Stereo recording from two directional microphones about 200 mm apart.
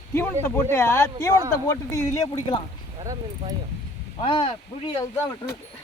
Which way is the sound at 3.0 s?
20° right (ahead or behind).